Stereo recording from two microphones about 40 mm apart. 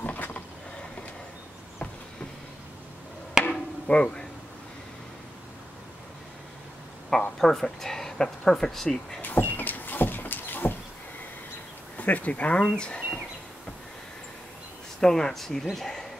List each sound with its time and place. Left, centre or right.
0.0 s a sound: left
3.4 s chop: centre
3.8 s speech: left
7.3 s speech: centre
9.2 s vehicle: left
12.0 s speech: left
12.5 s speech: centre
15.0 s speech: centre